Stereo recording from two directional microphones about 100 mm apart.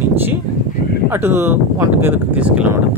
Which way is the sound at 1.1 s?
25° right (ahead or behind).